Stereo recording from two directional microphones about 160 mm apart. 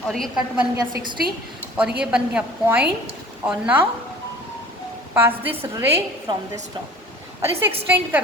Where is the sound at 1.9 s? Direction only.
5° right (ahead or behind).